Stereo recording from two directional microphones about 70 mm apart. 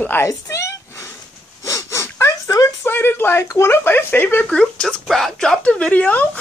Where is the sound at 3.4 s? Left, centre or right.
Left.